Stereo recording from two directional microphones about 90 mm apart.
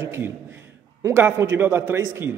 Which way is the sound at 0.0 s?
30° right (ahead or behind).